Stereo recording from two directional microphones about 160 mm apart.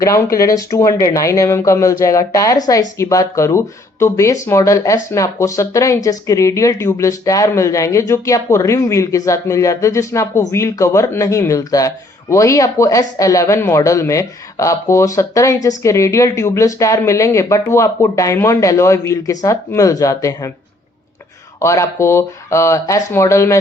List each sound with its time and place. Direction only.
0.0 s speech: 20° left (ahead or behind)
21.6 s speech: 20° left (ahead or behind)